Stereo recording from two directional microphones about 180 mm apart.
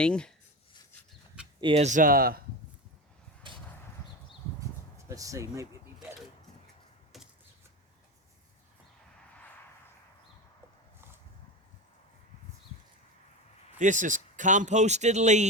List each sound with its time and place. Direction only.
0.0 s speech: 5° left (ahead or behind)
1.6 s speech: 40° right (ahead or behind); by 2.4 s 55° right (ahead or behind)
5.0 s speech: 20° right (ahead or behind)
13.7 s speech: 45° right (ahead or behind)